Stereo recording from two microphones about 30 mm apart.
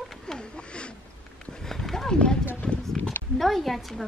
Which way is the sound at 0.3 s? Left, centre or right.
Left.